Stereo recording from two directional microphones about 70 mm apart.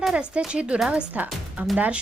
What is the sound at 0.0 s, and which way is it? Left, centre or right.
Speech, centre.